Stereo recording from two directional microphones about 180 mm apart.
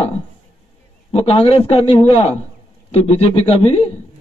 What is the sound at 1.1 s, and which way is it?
A man's voice, 30° left (ahead or behind).